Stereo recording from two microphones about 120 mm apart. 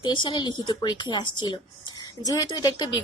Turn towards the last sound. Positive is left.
turn(degrees=35)  # may be behind; listen again after turning